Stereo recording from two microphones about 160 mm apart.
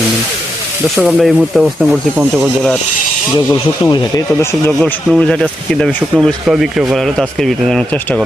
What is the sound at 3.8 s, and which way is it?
Speech, 30° left (ahead or behind).